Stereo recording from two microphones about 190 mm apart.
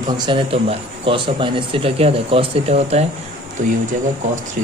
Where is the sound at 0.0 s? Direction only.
25° right (ahead or behind).